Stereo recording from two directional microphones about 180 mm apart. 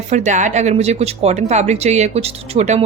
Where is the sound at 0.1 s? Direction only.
40° right (ahead or behind).